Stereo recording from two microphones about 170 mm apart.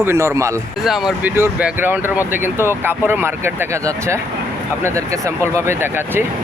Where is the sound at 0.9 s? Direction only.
Centre (ahead or behind).